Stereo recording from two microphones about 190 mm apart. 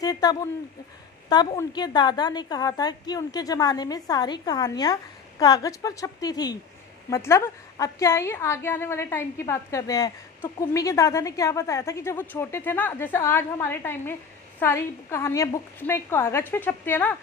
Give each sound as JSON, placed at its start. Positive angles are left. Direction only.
{"t": 0.0, "sound": "a woman's voice", "side_deg": 20}